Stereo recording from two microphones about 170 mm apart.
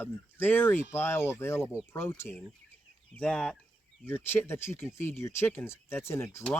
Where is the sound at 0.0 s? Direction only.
10° left (ahead or behind).